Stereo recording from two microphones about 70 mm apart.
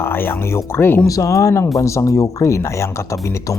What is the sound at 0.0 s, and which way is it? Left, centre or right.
Speech, left.